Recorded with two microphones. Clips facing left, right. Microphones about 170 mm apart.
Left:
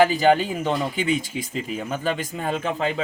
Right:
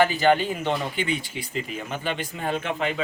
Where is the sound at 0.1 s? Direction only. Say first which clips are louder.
Left 2 dB; 40° left (ahead or behind).